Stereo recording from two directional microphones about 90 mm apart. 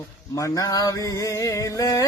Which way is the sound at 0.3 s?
40° left (ahead or behind).